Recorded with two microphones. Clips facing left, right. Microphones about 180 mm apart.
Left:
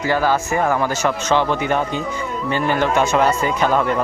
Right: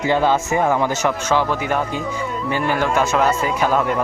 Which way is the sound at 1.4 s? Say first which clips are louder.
Left 1 dB; 5° right (ahead or behind).